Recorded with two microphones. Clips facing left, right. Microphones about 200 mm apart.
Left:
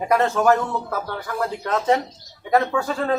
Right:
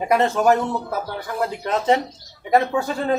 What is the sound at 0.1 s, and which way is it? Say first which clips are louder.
Speech: right 1 dB; 20° right (ahead or behind).